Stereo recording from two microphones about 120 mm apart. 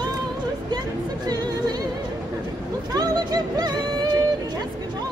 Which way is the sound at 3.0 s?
35° right (ahead or behind).